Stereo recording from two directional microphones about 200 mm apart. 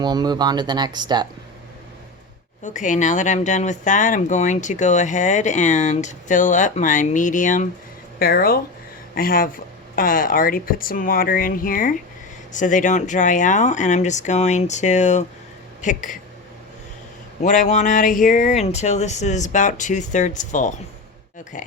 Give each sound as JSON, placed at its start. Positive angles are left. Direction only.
{"t": 0.0, "sound": "speech", "side_deg": -20}
{"t": 2.6, "sound": "speech", "side_deg": 40}
{"t": 17.4, "sound": "speech", "side_deg": 40}